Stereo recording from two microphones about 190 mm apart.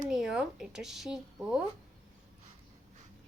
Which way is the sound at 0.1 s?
Centre (ahead or behind).